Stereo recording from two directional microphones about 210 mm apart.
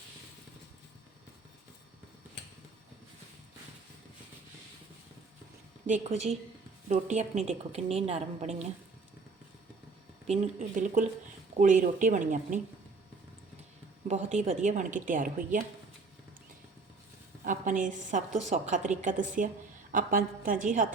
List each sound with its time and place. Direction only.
5.8 s a woman's voice: 35° right (ahead or behind)
10.2 s a woman's voice: 35° right (ahead or behind)
14.1 s a woman's voice: 35° right (ahead or behind)
17.4 s a woman's voice: 40° right (ahead or behind)